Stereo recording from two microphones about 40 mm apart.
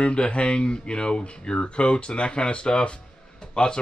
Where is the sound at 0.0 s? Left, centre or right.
Left.